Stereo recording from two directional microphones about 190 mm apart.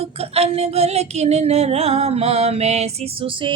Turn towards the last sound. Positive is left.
turn(degrees=-25)  # may be behind; listen again after turning